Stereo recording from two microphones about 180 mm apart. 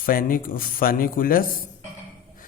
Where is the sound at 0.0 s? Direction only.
50° left (ahead or behind).